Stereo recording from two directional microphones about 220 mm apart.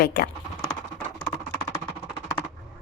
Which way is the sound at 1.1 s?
15° left (ahead or behind).